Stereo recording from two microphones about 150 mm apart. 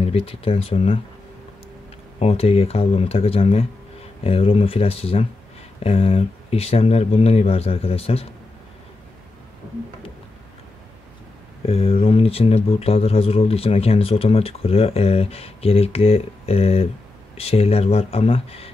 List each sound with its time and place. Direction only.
0.0 s speech: 40° left (ahead or behind)
2.1 s speech: 40° left (ahead or behind)
11.6 s speech: 40° left (ahead or behind)